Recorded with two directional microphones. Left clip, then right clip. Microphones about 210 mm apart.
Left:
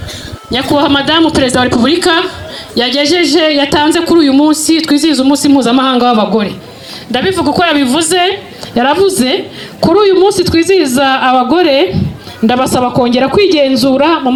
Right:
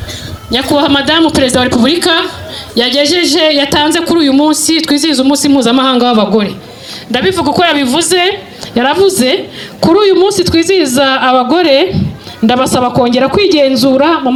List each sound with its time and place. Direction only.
0.5 s speech: 45° right (ahead or behind)